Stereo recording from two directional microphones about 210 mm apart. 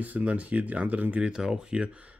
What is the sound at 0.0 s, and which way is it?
Speech, 5° right (ahead or behind).